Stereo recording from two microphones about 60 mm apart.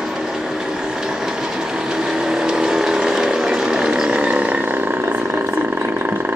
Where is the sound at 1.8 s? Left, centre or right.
Centre.